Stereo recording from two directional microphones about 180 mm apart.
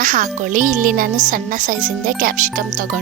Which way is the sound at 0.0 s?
45° right (ahead or behind).